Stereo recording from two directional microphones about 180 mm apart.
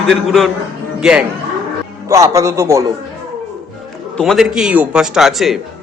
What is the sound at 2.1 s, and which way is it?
Speech, 15° right (ahead or behind).